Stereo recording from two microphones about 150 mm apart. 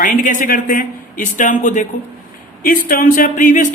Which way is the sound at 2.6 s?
70° left (ahead or behind).